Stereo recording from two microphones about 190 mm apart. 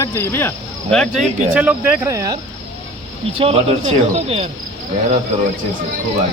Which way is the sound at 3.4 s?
30° right (ahead or behind).